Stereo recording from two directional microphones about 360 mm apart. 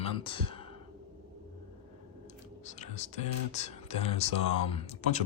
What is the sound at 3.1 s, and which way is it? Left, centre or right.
Speech, centre.